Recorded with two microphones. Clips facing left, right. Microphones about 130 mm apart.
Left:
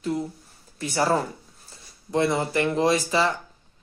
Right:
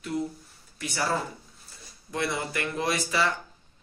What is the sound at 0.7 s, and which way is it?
Speech, 30° left (ahead or behind).